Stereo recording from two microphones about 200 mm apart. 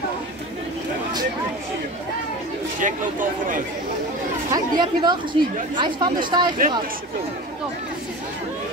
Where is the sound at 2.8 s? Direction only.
40° right (ahead or behind).